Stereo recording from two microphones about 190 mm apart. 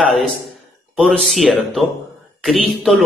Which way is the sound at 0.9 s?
Centre (ahead or behind).